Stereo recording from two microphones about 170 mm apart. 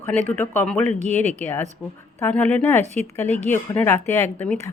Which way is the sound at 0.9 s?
40° right (ahead or behind).